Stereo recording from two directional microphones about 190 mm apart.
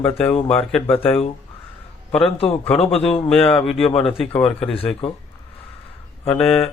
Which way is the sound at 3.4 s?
10° left (ahead or behind).